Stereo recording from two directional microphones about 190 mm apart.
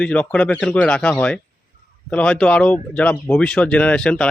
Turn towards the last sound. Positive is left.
turn(degrees=5)  # may be behind; listen again after turning